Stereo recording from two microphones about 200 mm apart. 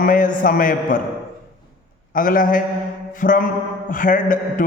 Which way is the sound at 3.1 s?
40° left (ahead or behind).